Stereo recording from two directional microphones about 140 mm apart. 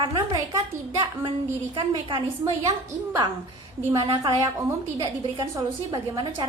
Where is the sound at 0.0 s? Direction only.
30° right (ahead or behind).